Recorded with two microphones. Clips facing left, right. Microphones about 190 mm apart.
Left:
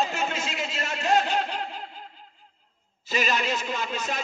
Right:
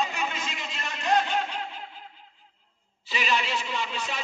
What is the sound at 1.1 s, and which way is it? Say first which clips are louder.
Snicker: even; 40° left (ahead or behind).